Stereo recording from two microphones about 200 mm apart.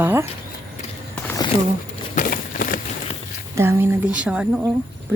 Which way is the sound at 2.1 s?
45° left (ahead or behind).